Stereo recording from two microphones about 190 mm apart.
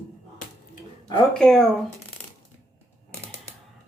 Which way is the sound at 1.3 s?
5° left (ahead or behind).